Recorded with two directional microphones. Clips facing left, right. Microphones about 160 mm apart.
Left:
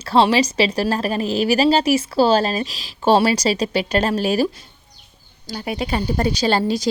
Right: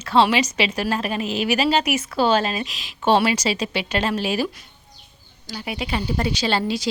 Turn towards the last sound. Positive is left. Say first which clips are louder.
# left 4 dB
turn(degrees=40)  # may be behind; listen again after turning